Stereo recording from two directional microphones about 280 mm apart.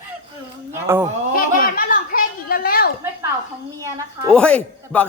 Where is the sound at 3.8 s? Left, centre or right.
Centre.